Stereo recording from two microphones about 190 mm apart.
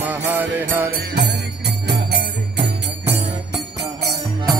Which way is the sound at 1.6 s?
60° right (ahead or behind).